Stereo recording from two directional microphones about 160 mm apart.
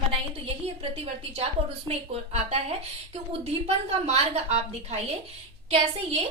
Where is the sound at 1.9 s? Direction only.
40° right (ahead or behind).